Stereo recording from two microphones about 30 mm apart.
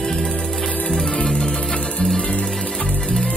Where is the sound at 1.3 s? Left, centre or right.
Left.